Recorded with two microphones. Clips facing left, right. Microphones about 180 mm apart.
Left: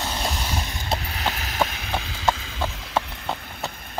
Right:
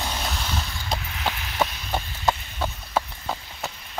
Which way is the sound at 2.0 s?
90° left.